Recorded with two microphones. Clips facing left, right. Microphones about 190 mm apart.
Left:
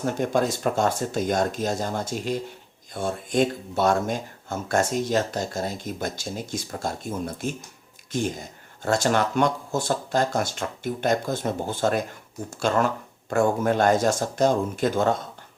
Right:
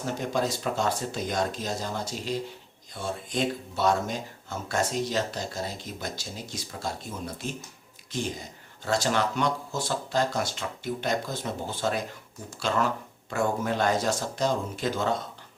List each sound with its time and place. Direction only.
0.0 s speech: 50° left (ahead or behind)